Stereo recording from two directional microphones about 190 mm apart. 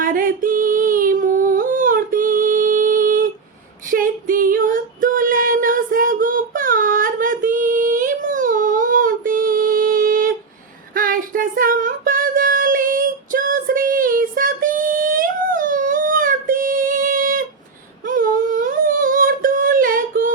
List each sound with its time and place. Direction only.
0.0 s a sound: 45° right (ahead or behind)
3.9 s female singing: 45° right (ahead or behind)
18.0 s humming: 45° right (ahead or behind)